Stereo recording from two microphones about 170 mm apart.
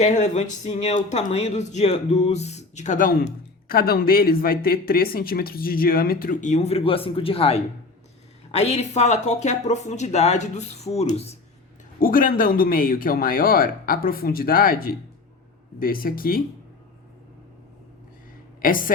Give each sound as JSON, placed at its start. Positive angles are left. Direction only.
{"t": 0.0, "sound": "speech", "side_deg": 45}
{"t": 11.9, "sound": "speech", "side_deg": 55}
{"t": 18.6, "sound": "speech", "side_deg": 55}